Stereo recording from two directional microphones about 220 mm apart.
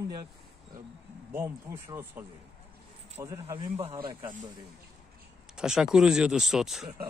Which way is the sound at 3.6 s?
30° right (ahead or behind).